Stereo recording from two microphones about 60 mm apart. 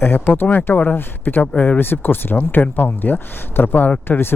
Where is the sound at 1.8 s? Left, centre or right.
Left.